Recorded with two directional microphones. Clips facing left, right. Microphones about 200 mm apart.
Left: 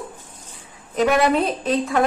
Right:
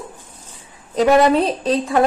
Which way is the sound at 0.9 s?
30° right (ahead or behind).